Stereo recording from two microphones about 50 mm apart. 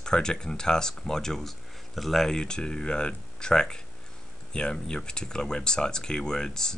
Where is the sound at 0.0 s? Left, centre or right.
Centre.